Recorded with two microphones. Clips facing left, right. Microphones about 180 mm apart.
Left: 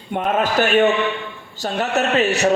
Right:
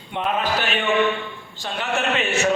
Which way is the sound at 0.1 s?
45° left (ahead or behind).